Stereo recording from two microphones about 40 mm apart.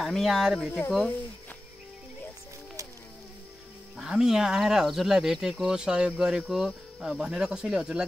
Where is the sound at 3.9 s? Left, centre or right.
Centre.